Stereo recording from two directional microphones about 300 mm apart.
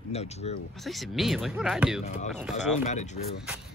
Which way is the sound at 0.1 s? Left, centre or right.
Left.